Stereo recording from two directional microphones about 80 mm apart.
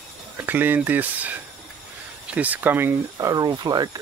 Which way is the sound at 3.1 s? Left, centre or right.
Right.